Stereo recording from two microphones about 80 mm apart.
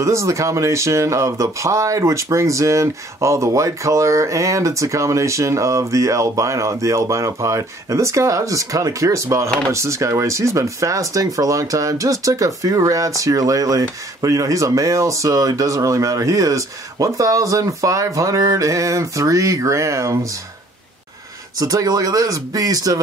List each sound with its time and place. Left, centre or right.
0.0 s speech: right
21.5 s speech: right